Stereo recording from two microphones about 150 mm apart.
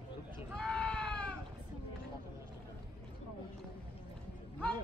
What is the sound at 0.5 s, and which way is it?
Sheep, 5° left (ahead or behind).